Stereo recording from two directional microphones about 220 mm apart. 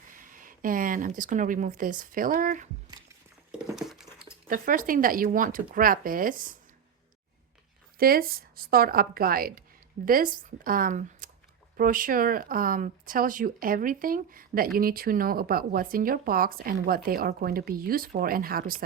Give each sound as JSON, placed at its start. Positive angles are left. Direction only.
{"t": 0.1, "sound": "speech", "side_deg": -40}
{"t": 3.8, "sound": "a sound", "side_deg": 0}
{"t": 4.4, "sound": "speech", "side_deg": -40}
{"t": 7.9, "sound": "speech", "side_deg": -40}